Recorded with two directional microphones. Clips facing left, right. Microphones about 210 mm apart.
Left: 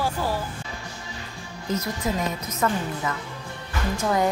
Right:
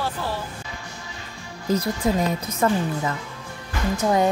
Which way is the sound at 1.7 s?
30° right (ahead or behind).